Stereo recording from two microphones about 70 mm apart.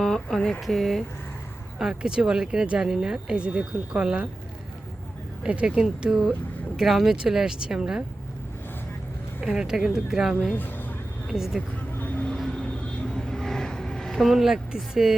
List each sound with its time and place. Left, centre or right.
0.0 s speech: centre
1.8 s speech: centre
5.4 s speech: centre
9.4 s speech: centre
10.5 s a sound: left
11.3 s speech: centre
11.9 s vehicle: left
12.3 s vehicle: centre